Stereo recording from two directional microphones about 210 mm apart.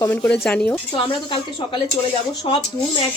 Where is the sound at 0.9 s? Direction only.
25° left (ahead or behind).